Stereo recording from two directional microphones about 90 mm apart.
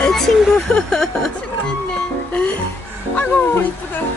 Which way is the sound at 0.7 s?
5° left (ahead or behind).